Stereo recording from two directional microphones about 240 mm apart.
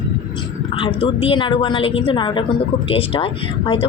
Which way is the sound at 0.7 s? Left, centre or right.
Left.